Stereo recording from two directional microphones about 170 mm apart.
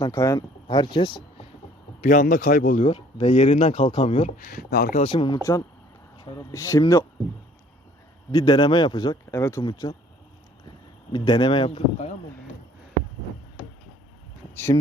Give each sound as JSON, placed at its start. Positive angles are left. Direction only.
{"t": 0.0, "sound": "speech", "side_deg": 20}
{"t": 2.0, "sound": "speech", "side_deg": 50}
{"t": 2.8, "sound": "speech", "side_deg": 35}
{"t": 4.4, "sound": "speech", "side_deg": 60}
{"t": 4.9, "sound": "speech", "side_deg": 30}
{"t": 5.4, "sound": "speech", "side_deg": 20}
{"t": 8.3, "sound": "speech", "side_deg": 25}
{"t": 11.1, "sound": "speech", "side_deg": 30}
{"t": 14.5, "sound": "speech", "side_deg": 15}